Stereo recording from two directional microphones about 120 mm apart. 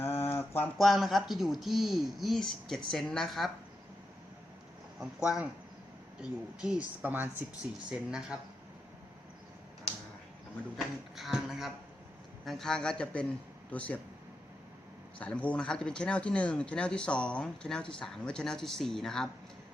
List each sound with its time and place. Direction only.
0.0 s a sound: 20° left (ahead or behind)
0.8 s speech: centre (ahead or behind)
4.9 s speech: 5° right (ahead or behind)
10.8 s speech: centre (ahead or behind)
15.2 s speech: 10° left (ahead or behind)